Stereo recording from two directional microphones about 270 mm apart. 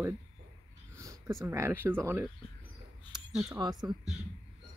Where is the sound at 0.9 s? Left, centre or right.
Centre.